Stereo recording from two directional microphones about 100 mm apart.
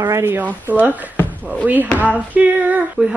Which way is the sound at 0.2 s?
20° right (ahead or behind).